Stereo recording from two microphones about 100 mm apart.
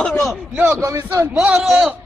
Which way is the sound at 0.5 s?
15° right (ahead or behind).